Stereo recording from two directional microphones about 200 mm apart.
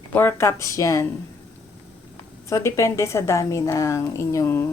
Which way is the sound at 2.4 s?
15° left (ahead or behind).